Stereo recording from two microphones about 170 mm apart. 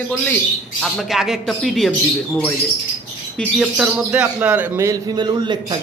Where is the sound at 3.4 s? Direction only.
Centre (ahead or behind).